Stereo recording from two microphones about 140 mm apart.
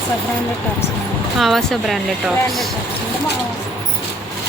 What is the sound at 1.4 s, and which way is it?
Speech, centre (ahead or behind).